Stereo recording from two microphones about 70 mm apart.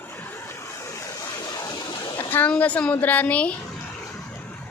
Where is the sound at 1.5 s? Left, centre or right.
Left.